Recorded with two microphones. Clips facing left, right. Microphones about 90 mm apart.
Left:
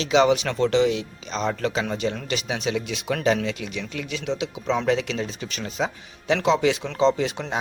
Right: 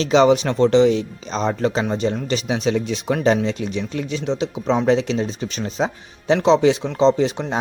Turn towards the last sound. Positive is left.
turn(degrees=-25)  # may be behind; listen again after turning